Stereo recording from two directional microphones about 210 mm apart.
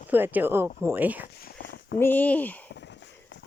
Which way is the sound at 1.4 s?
50° left (ahead or behind).